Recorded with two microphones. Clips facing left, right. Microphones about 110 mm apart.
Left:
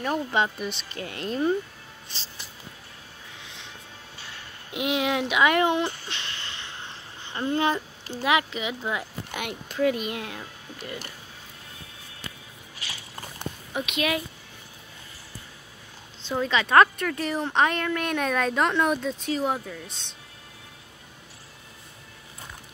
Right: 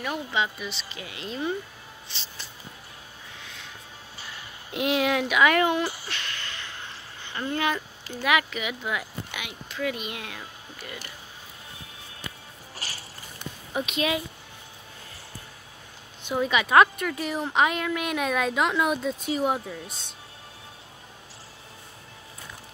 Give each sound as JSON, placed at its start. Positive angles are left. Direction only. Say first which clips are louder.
{"t": 0.3, "sound": "speech", "louder": "left 3 dB", "side_deg": 50}
{"t": 4.7, "sound": "speech", "louder": "right 1 dB", "side_deg": 15}
{"t": 6.0, "sound": "a sound", "louder": "right 1 dB", "side_deg": 25}
{"t": 9.3, "sound": "speech", "louder": "left 5 dB", "side_deg": 50}
{"t": 9.8, "sound": "speech", "louder": "left 6 dB", "side_deg": 35}
{"t": 12.7, "sound": "a sound", "louder": "right 1 dB", "side_deg": -40}
{"t": 13.8, "sound": "speech", "louder": "left 1 dB", "side_deg": -35}
{"t": 16.2, "sound": "a woman's voice", "louder": "right 1 dB", "side_deg": -15}